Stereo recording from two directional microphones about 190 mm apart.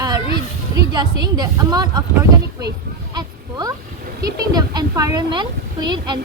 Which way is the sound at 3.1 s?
20° right (ahead or behind).